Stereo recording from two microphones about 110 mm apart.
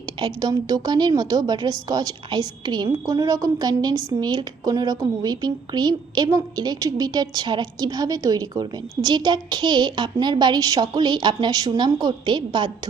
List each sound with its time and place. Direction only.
0.0 s a woman's voice: 35° right (ahead or behind)